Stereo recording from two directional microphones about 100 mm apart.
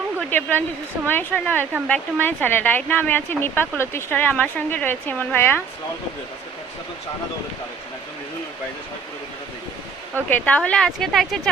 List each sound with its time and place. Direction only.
0.3 s speech: 20° left (ahead or behind)
10.2 s speech: 15° left (ahead or behind)